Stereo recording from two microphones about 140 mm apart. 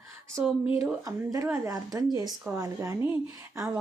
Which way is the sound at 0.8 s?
25° right (ahead or behind).